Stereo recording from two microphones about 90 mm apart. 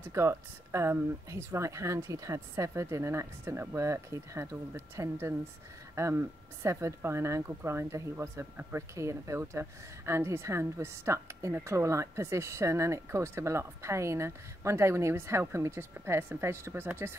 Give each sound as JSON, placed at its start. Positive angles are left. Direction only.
{"t": 0.0, "sound": "a woman's voice", "side_deg": -30}